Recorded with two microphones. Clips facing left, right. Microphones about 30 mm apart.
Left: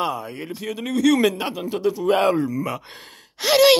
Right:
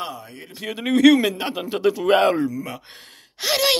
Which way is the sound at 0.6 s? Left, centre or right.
Centre.